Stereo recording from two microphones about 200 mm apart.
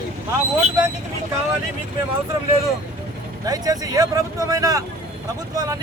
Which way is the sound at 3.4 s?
20° right (ahead or behind).